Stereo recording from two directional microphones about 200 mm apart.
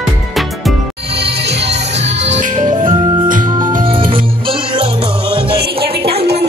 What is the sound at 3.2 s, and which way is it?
Music, 40° right (ahead or behind).